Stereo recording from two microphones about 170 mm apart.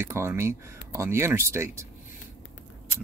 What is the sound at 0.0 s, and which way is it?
Speech, 15° right (ahead or behind).